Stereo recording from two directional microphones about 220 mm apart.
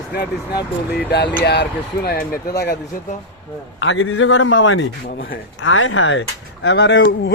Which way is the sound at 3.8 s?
60° left (ahead or behind).